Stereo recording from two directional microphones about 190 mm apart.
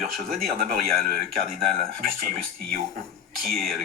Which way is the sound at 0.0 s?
Centre (ahead or behind).